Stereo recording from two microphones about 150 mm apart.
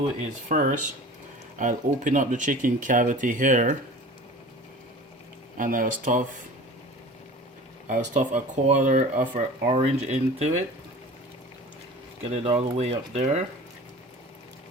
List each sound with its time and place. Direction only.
0.4 s speech: 55° right (ahead or behind)
5.5 s speech: 65° right (ahead or behind)
7.9 s speech: 60° right (ahead or behind)
9.6 s speech: 40° right (ahead or behind)
12.3 s speech: 45° right (ahead or behind)